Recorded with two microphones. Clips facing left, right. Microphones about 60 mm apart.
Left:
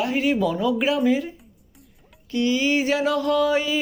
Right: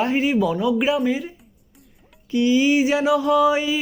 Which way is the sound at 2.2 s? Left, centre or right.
Centre.